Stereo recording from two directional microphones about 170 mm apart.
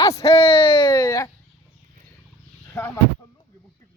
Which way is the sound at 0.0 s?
20° left (ahead or behind).